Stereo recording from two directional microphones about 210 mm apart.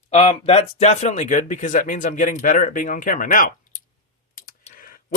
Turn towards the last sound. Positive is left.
turn(degrees=40)  # may be behind; listen again after turning